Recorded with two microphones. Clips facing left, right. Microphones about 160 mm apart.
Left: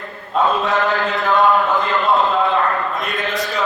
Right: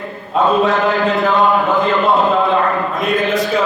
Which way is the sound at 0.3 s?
Centre (ahead or behind).